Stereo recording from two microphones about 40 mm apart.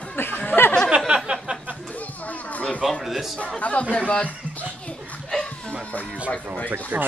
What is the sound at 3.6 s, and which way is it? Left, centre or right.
Speech, left.